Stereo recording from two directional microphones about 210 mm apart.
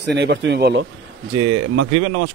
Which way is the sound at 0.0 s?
55° right (ahead or behind).